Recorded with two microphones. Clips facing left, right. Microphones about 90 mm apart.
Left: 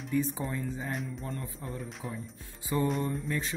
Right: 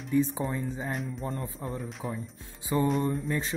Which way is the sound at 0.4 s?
30° right (ahead or behind).